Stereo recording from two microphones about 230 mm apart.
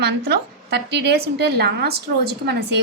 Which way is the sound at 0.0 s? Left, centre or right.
Right.